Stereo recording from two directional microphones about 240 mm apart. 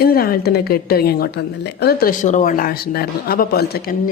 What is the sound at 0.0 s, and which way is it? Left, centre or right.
A woman's voice, left.